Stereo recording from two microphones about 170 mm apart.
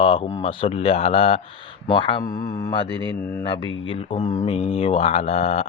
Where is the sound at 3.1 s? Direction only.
10° left (ahead or behind).